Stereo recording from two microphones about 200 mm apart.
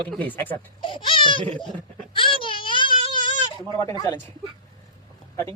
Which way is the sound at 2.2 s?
25° left (ahead or behind).